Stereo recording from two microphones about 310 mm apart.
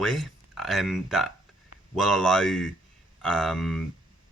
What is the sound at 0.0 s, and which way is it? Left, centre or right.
Speech, centre.